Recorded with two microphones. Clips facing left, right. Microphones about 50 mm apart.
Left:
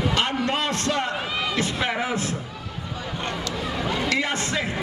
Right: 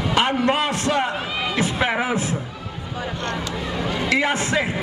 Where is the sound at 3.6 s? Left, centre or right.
Centre.